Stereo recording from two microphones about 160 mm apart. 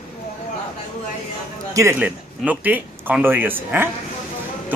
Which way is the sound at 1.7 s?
15° right (ahead or behind).